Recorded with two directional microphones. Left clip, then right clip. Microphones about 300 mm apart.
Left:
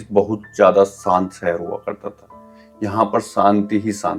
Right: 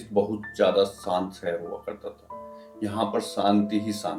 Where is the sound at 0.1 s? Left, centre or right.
Left.